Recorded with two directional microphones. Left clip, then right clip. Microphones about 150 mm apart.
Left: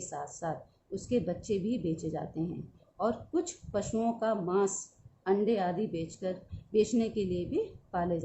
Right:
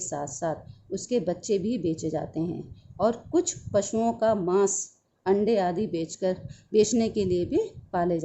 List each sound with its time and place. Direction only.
0.0 s speech: 55° right (ahead or behind)